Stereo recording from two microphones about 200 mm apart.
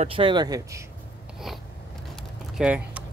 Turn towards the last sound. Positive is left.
turn(degrees=-5)  # may be behind; listen again after turning